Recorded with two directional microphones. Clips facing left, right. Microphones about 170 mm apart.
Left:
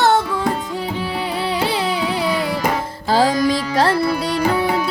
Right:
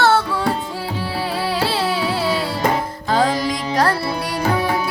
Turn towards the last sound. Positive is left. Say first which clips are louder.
# left 2 dB
turn(degrees=30)  # may be behind; listen again after turning